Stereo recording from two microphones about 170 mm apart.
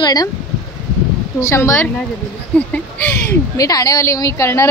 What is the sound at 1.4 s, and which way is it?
Speech, 15° left (ahead or behind).